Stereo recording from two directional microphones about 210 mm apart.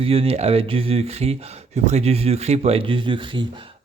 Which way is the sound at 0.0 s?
25° right (ahead or behind).